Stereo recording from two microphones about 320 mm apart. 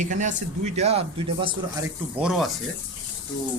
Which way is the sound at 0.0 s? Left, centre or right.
Right.